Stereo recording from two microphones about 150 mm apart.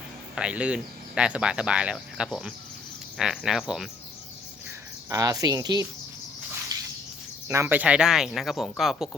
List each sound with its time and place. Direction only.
0.3 s speech: 5° right (ahead or behind)
5.0 s speech: 25° right (ahead or behind)
7.4 s speech: 20° right (ahead or behind); by 9.0 s centre (ahead or behind)